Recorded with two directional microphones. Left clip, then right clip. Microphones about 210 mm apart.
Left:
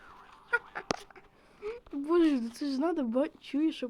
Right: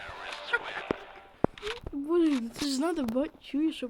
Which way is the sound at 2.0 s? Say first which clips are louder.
Even; centre (ahead or behind).